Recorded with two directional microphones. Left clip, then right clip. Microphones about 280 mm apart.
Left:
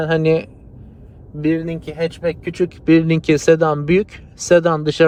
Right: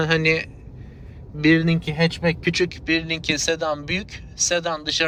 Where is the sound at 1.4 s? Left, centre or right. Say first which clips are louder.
Right 2 dB; centre.